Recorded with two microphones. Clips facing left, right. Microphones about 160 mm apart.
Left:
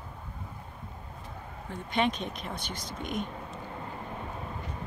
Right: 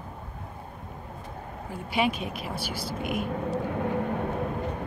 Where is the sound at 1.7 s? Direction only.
10° right (ahead or behind).